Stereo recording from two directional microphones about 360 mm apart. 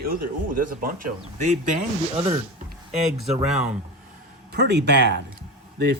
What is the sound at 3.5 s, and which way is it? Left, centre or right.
Speech, centre.